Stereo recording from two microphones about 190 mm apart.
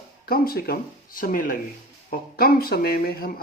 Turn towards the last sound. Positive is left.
turn(degrees=50)  # may be behind; listen again after turning